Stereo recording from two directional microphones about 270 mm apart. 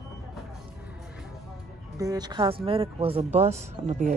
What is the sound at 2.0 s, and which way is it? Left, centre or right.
Speech, centre.